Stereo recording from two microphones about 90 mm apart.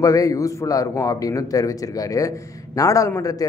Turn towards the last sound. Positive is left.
turn(degrees=35)  # may be behind; listen again after turning